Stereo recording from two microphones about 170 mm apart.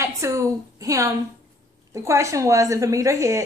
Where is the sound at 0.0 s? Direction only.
15° right (ahead or behind).